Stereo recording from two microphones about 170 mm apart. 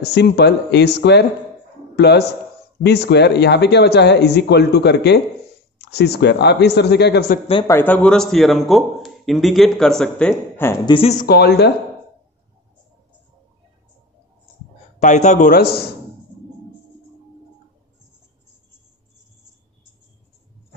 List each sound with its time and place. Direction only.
0.0 s speech: 80° left
7.6 s a man's voice: 10° left (ahead or behind)
10.9 s speech: 35° left (ahead or behind)
11.2 s speech: 70° left (ahead or behind)
15.0 s speech: 45° left (ahead or behind)